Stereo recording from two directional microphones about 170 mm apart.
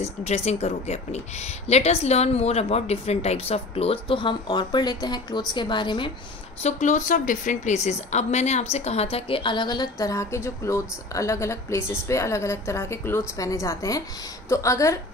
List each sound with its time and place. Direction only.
0.0 s speech: 40° left (ahead or behind)
6.6 s a woman's voice: 45° left (ahead or behind); by 15.0 s 20° left (ahead or behind)